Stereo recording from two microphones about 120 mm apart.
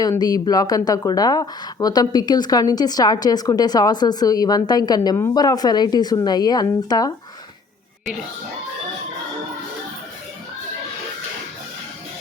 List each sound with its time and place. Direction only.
0.0 s speech: 30° left (ahead or behind)